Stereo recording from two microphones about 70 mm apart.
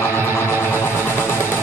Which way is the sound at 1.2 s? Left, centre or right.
Left.